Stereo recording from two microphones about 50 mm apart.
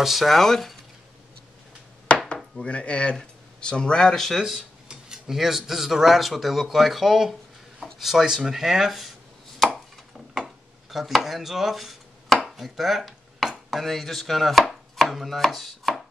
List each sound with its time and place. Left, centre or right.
0.0 s speech: centre
2.6 s speech: left; by 4.4 s centre
4.4 s speech: centre
10.9 s speech: centre
14.6 s chopping: centre